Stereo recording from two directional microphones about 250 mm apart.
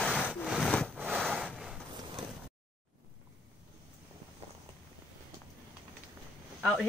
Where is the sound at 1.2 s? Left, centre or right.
Centre.